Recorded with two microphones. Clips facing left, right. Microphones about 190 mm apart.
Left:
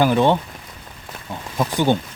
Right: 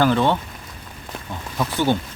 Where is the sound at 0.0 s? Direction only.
15° left (ahead or behind).